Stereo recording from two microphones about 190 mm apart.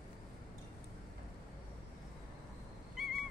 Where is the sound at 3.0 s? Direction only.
Centre (ahead or behind).